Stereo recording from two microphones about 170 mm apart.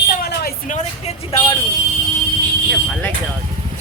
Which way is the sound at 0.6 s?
45° left (ahead or behind).